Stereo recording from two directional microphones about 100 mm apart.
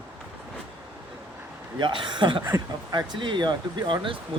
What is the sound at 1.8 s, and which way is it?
Speech, 50° right (ahead or behind).